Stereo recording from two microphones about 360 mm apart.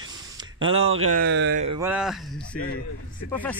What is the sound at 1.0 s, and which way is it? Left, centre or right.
Speech, right.